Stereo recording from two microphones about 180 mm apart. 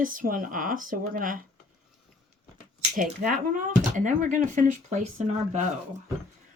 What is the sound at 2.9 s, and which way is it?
Speech, 45° right (ahead or behind).